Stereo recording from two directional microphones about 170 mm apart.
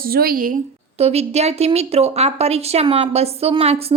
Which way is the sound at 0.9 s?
40° right (ahead or behind).